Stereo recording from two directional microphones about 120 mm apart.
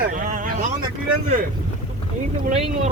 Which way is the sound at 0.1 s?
90° right.